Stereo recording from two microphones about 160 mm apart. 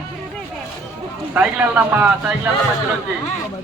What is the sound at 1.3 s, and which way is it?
Speech, 10° right (ahead or behind).